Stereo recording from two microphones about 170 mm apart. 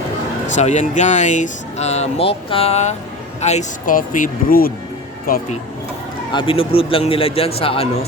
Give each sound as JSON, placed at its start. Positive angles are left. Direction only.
{"t": 0.4, "sound": "speech", "side_deg": 45}
{"t": 6.3, "sound": "speech", "side_deg": 30}